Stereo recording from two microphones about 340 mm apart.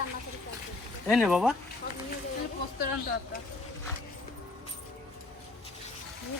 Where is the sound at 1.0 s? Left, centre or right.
Centre.